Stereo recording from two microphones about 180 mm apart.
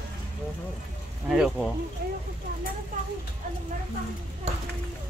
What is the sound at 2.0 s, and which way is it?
Speech, 60° right (ahead or behind).